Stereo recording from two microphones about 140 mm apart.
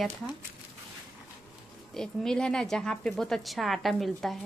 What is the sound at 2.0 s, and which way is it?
A woman's voice, 5° left (ahead or behind).